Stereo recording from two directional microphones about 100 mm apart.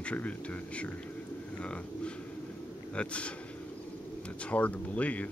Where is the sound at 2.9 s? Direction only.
10° left (ahead or behind).